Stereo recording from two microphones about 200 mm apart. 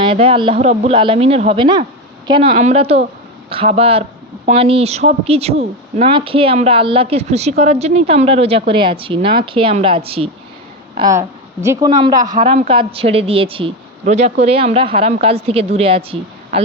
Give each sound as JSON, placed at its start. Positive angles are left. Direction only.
{"t": 0.0, "sound": "speech", "side_deg": -25}
{"t": 2.5, "sound": "speech", "side_deg": -35}
{"t": 10.9, "sound": "speech", "side_deg": -15}
{"t": 12.4, "sound": "speech", "side_deg": -35}